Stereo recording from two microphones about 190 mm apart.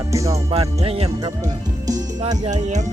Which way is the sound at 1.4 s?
20° right (ahead or behind).